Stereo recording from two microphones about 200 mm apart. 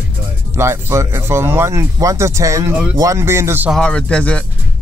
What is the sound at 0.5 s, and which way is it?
Speech, 15° right (ahead or behind).